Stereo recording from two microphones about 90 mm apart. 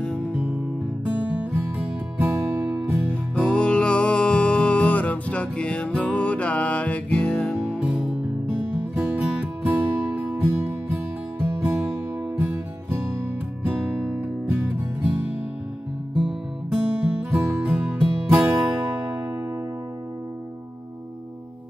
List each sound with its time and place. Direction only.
1.4 s music: 20° right (ahead or behind)
3.1 s music: 10° left (ahead or behind)
7.6 s music: 10° right (ahead or behind)
16.2 s music: 10° right (ahead or behind)
17.3 s music: 20° right (ahead or behind)